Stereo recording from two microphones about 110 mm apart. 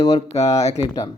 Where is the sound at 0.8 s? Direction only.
35° left (ahead or behind).